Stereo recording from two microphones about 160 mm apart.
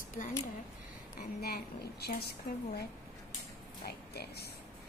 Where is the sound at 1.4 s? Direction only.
80° left.